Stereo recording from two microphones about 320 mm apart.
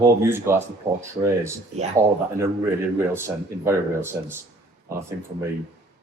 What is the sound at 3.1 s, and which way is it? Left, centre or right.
Speech, centre.